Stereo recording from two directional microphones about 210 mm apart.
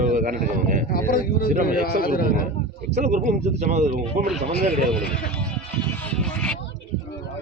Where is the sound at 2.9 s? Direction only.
35° right (ahead or behind).